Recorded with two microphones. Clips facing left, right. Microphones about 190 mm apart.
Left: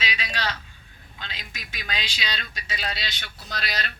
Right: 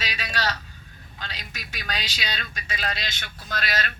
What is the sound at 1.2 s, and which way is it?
Speech, 40° right (ahead or behind).